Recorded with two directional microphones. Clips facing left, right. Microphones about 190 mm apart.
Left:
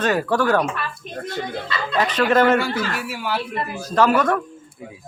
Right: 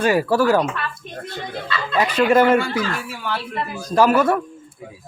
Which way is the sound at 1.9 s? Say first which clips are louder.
Right 2 dB; 10° right (ahead or behind).